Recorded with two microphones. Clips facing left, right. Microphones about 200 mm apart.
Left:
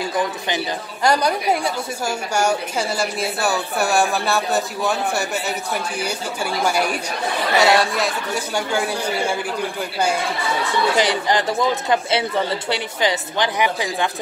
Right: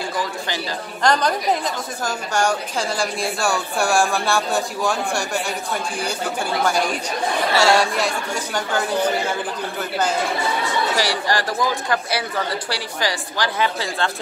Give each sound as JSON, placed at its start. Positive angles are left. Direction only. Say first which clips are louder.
{"t": 1.0, "sound": "a woman's voice", "louder": "left 1 dB", "side_deg": 10}
{"t": 7.5, "sound": "a woman's voice", "louder": "left 1 dB", "side_deg": 20}
{"t": 7.9, "sound": "speech", "louder": "left 1 dB", "side_deg": 5}
{"t": 11.0, "sound": "a woman's voice", "louder": "left 3 dB", "side_deg": 20}